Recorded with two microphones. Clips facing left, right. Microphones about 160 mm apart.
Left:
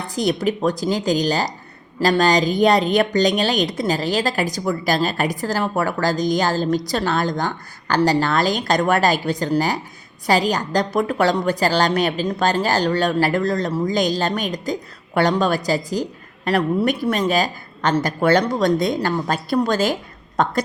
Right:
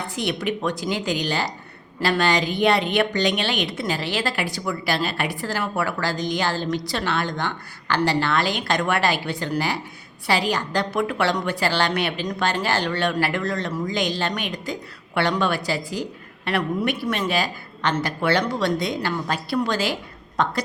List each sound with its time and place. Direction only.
0.2 s a woman's voice: 40° left (ahead or behind)